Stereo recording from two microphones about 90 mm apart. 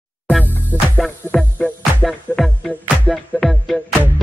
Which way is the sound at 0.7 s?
25° right (ahead or behind).